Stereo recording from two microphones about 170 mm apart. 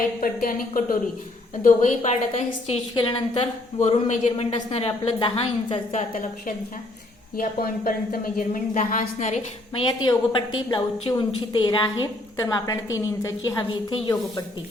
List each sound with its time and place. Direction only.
0.2 s speech: 55° left (ahead or behind)
1.6 s a woman's voice: 45° left (ahead or behind)
3.8 s a woman's voice: 40° left (ahead or behind)
7.3 s a woman's voice: 60° left (ahead or behind); by 9.8 s 40° left (ahead or behind)
10.0 s a woman's voice: 30° left (ahead or behind)